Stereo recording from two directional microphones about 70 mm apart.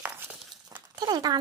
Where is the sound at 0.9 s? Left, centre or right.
Right.